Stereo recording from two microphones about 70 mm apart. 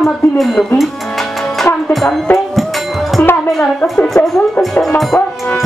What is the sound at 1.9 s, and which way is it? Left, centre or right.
Music, centre.